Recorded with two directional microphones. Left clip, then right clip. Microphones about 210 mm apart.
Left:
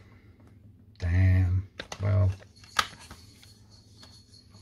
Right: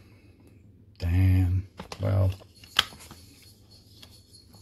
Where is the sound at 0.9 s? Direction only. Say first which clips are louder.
Right 2 dB; 30° right (ahead or behind).